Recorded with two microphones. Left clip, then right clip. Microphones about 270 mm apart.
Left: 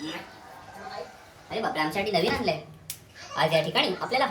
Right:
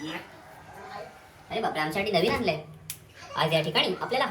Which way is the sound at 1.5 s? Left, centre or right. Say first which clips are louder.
Left 1 dB; centre.